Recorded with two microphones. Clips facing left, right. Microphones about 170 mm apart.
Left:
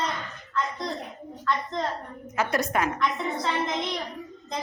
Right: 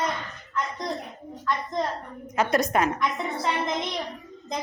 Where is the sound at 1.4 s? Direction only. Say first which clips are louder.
Right 1 dB; 15° right (ahead or behind).